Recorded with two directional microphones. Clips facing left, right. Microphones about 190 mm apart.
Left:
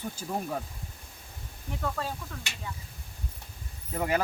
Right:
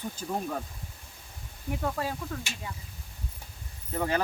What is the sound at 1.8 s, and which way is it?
Speech, 15° right (ahead or behind).